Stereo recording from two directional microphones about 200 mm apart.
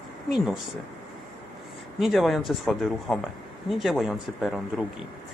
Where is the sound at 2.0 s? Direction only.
Centre (ahead or behind).